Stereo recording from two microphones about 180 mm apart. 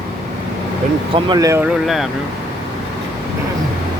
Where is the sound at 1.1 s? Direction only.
20° right (ahead or behind).